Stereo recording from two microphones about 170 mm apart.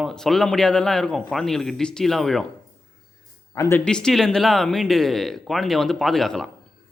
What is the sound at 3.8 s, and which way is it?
A man's voice, 5° left (ahead or behind).